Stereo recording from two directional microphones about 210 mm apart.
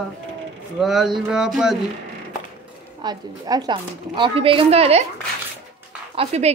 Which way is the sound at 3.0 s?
20° right (ahead or behind).